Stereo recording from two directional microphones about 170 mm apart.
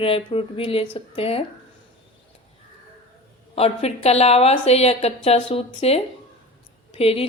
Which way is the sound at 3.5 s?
35° left (ahead or behind).